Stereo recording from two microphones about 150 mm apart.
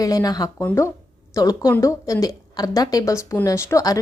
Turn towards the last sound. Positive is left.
turn(degrees=20)  # may be behind; listen again after turning